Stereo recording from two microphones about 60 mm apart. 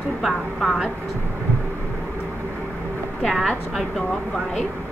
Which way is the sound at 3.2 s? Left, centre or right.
Centre.